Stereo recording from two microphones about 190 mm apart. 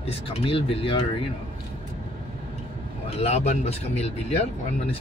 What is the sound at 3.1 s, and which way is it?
Speech, 35° left (ahead or behind).